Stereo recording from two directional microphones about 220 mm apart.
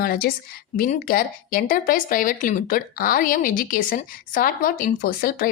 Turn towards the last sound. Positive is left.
turn(degrees=40)  # may be behind; listen again after turning